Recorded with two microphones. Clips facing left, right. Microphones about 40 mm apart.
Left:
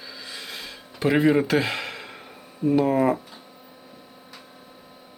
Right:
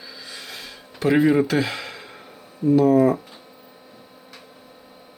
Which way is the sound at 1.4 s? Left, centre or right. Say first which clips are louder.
Even; left.